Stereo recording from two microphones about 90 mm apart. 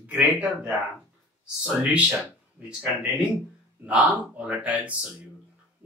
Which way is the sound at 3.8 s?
15° right (ahead or behind).